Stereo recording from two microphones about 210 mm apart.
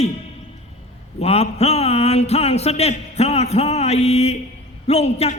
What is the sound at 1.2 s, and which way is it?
Speech, 30° left (ahead or behind).